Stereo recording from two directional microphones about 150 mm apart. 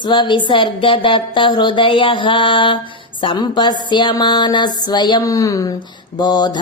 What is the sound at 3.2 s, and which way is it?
Mantra, 30° left (ahead or behind).